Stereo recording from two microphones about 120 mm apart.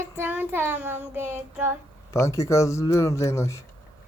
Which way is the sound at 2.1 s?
25° left (ahead or behind).